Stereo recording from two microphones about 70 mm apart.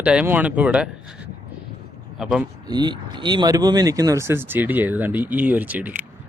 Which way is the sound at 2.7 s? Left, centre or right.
Right.